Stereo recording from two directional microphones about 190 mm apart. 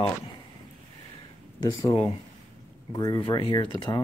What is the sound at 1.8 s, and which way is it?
Speech, 25° left (ahead or behind).